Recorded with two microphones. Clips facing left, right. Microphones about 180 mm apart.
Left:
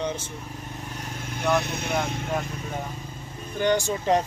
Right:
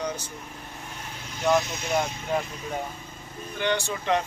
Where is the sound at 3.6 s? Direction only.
40° left (ahead or behind).